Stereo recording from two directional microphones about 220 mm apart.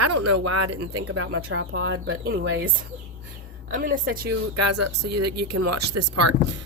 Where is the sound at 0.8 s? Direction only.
70° right (ahead or behind); by 2.7 s 50° right (ahead or behind).